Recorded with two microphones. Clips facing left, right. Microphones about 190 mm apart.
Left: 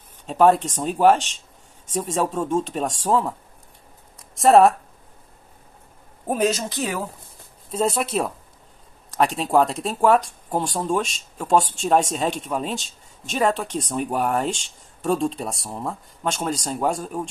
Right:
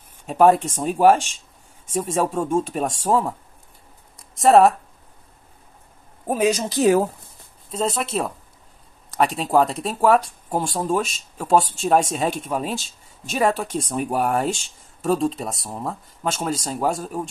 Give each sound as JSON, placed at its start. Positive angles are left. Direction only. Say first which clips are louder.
{"t": 0.3, "sound": "speech", "louder": "right 1 dB", "side_deg": -10}
{"t": 4.4, "sound": "speech", "louder": "even", "side_deg": 0}
{"t": 6.2, "sound": "speech", "louder": "right 1 dB", "side_deg": -10}
{"t": 6.7, "sound": "speech", "louder": "right 10 dB", "side_deg": -35}
{"t": 7.7, "sound": "speech", "louder": "left 1 dB", "side_deg": 5}